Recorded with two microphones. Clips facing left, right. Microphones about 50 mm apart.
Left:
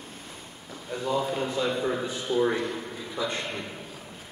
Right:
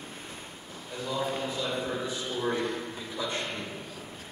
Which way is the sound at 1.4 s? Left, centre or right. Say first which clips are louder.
Left 5 dB; left.